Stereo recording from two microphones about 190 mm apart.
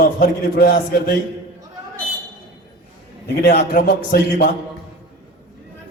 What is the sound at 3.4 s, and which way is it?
A man's voice, 55° left (ahead or behind).